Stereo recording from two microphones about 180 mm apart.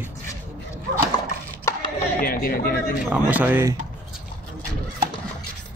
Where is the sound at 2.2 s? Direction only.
55° left (ahead or behind).